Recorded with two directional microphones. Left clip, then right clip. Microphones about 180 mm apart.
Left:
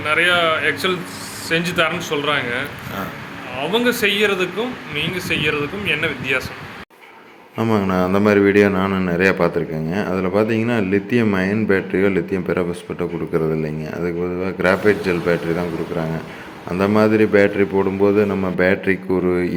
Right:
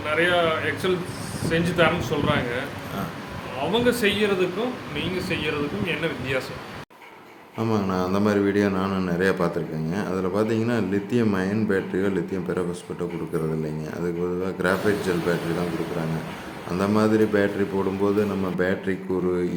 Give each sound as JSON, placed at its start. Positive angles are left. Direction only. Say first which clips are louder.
{"t": 0.0, "sound": "speech", "louder": "left 5 dB", "side_deg": 15}
{"t": 3.7, "sound": "speech", "louder": "left 4 dB", "side_deg": 10}
{"t": 7.6, "sound": "a man's voice", "louder": "left 6 dB", "side_deg": 20}
{"t": 16.7, "sound": "a man's voice", "louder": "left 6 dB", "side_deg": 20}